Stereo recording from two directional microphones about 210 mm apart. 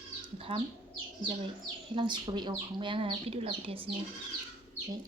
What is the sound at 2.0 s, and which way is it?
Speech, 20° right (ahead or behind).